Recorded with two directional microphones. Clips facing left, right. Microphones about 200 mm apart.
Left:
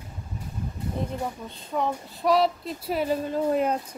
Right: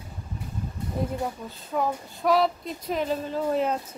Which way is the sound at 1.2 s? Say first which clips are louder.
Right 1 dB; 5° right (ahead or behind).